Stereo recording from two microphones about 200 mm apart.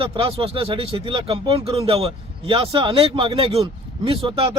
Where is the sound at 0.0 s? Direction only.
25° right (ahead or behind).